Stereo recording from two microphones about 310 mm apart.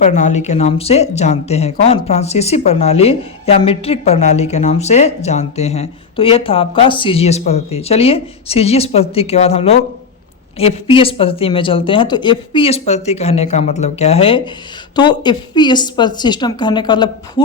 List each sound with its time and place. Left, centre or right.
0.0 s speech: left